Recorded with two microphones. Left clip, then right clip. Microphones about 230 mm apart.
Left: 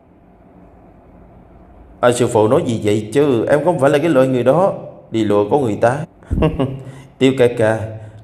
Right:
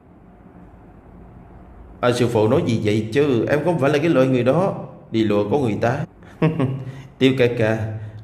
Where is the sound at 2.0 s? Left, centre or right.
Centre.